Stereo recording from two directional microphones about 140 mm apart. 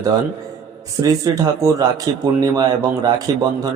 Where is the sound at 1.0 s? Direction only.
25° right (ahead or behind).